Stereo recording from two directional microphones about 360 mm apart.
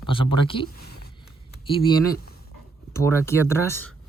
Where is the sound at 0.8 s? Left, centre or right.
Left.